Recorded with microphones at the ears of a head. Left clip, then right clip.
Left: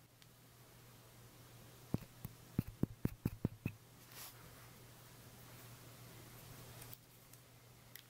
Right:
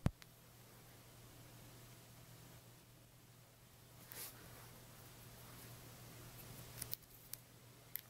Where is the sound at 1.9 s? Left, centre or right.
Left.